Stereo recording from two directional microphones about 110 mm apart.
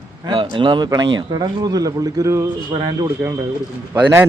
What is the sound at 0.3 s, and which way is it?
Speech, 50° right (ahead or behind).